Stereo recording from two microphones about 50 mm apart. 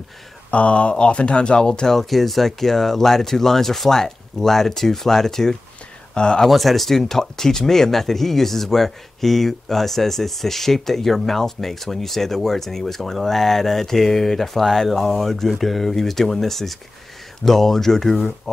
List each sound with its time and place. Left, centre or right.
0.5 s speech: left
2.0 s speech: centre
6.4 s speech: centre